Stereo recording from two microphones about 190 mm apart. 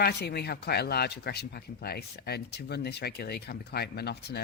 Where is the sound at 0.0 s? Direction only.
60° left (ahead or behind).